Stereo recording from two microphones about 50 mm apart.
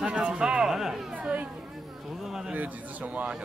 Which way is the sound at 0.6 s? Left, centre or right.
Centre.